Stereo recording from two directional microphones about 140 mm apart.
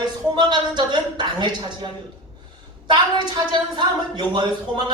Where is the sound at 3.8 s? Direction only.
30° right (ahead or behind).